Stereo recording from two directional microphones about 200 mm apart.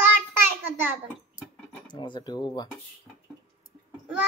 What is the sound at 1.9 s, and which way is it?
Speech, 20° left (ahead or behind).